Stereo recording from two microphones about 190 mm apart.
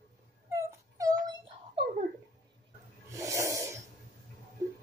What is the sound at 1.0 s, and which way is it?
Wail, 20° right (ahead or behind).